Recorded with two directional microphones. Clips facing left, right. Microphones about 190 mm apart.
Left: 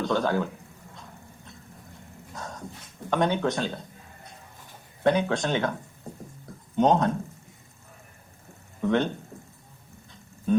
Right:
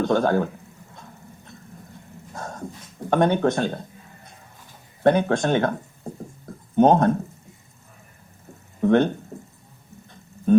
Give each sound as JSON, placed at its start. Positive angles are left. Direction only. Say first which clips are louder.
{"t": 0.0, "sound": "speech", "louder": "right 5 dB", "side_deg": -50}
{"t": 2.3, "sound": "dog", "louder": "right 5 dB", "side_deg": -50}
{"t": 3.1, "sound": "speech", "louder": "right 5 dB", "side_deg": -50}
{"t": 5.0, "sound": "speech", "louder": "right 5 dB", "side_deg": -50}
{"t": 6.7, "sound": "speech", "louder": "right 5 dB", "side_deg": -50}
{"t": 8.8, "sound": "speech", "louder": "right 6 dB", "side_deg": -50}
{"t": 10.1, "sound": "a sound", "louder": "right 7 dB", "side_deg": -50}